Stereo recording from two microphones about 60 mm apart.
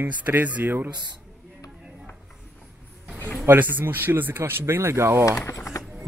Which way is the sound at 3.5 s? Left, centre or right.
Right.